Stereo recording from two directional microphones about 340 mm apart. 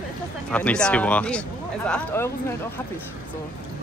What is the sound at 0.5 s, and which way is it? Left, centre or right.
Speech, centre.